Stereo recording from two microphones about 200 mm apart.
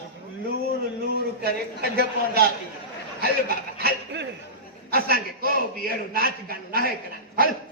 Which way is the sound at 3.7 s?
55° right (ahead or behind).